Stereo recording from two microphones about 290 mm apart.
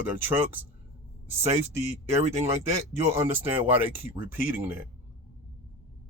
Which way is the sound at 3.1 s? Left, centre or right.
Centre.